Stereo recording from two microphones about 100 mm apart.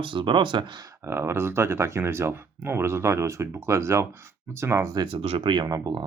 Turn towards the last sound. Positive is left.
turn(degrees=-40)  # may be behind; listen again after turning